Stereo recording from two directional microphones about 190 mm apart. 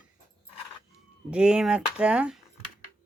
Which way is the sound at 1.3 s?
5° right (ahead or behind).